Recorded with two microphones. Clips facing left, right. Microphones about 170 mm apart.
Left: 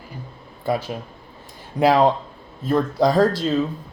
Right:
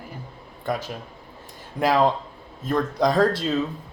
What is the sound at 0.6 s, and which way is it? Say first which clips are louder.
Speech: left 4 dB; 10° left (ahead or behind).